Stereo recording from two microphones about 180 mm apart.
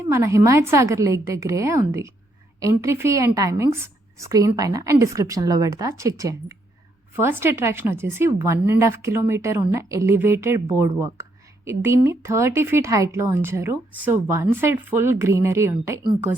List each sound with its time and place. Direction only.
0.1 s a woman's voice: 15° right (ahead or behind)